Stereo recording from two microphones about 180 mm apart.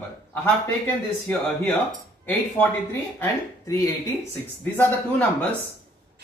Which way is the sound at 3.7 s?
20° left (ahead or behind).